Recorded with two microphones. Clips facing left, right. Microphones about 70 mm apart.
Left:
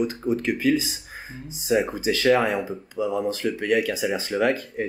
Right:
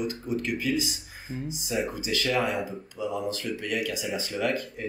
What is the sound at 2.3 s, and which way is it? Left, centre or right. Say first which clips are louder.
Speech: left 8 dB; left.